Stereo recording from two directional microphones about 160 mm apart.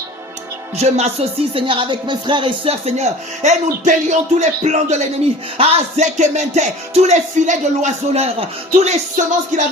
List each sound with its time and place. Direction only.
0.8 s music: 45° right (ahead or behind)
1.5 s speech: 30° right (ahead or behind); by 4.9 s 45° right (ahead or behind)
5.5 s music: 45° right (ahead or behind)